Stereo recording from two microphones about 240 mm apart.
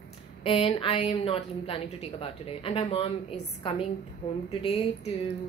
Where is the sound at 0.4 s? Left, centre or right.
Left.